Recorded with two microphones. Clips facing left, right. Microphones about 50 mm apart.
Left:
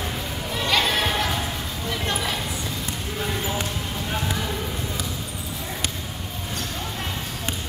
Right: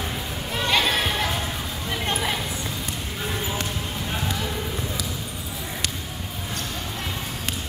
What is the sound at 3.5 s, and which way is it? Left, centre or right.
Basketball bounce, centre.